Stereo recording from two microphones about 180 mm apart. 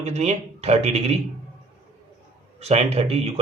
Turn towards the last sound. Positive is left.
turn(degrees=-35)  # may be behind; listen again after turning